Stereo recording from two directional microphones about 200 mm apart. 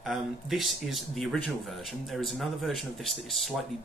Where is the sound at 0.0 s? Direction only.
Centre (ahead or behind).